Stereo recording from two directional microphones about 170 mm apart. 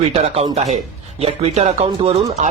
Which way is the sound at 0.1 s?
35° right (ahead or behind).